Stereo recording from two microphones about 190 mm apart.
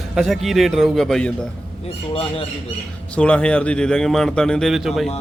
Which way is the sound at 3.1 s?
5° left (ahead or behind).